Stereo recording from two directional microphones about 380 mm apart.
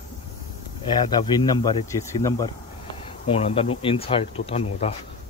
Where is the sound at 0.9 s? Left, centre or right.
Centre.